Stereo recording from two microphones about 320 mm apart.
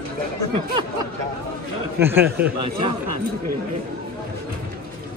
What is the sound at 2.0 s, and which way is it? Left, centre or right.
Speech, centre.